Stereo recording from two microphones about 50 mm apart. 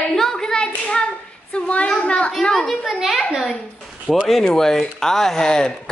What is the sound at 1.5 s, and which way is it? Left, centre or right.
Speech, left.